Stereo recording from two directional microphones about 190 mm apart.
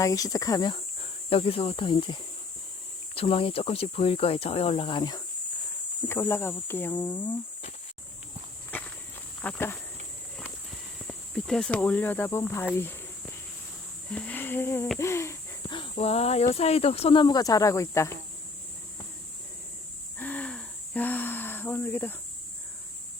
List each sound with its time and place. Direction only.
0.0 s speech: 20° left (ahead or behind)
6.1 s speech: 10° left (ahead or behind)
9.4 s speech: 10° left (ahead or behind)
11.0 s speech: 5° left (ahead or behind)
14.1 s speech: 5° left (ahead or behind)
15.6 s speech: 25° left (ahead or behind)
20.1 s wheeze: 10° left (ahead or behind)